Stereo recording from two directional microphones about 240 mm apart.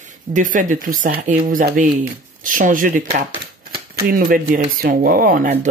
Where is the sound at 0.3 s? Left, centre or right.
Right.